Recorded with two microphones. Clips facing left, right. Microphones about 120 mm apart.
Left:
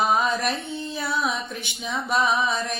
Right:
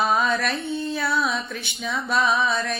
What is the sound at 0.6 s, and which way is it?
Music, 55° right (ahead or behind).